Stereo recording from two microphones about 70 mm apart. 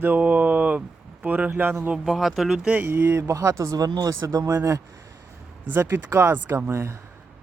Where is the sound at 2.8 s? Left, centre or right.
Right.